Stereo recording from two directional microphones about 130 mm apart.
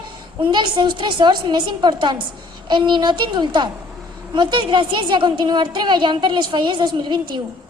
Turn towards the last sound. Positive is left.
turn(degrees=-35)  # may be behind; listen again after turning